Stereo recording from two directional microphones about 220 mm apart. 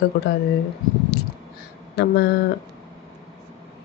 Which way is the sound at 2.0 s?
45° left (ahead or behind).